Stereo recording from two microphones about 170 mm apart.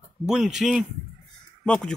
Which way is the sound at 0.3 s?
5° right (ahead or behind).